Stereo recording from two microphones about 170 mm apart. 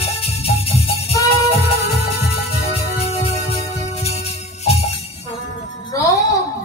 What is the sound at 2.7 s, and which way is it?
Music, 40° left (ahead or behind).